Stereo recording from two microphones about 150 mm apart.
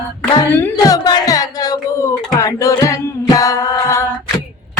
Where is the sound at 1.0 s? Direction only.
25° left (ahead or behind).